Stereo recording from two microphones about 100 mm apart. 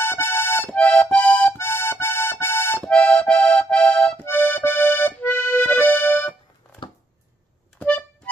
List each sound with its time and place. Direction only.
0.0 s accordion: 25° left (ahead or behind)
2.8 s accordion: 10° left (ahead or behind)
7.8 s music: 10° left (ahead or behind)